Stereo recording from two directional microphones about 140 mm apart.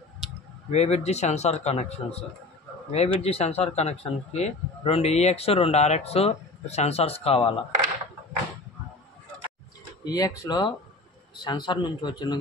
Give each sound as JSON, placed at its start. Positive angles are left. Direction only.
{"t": 0.7, "sound": "a man's voice", "side_deg": 50}
{"t": 10.0, "sound": "a man's voice", "side_deg": 25}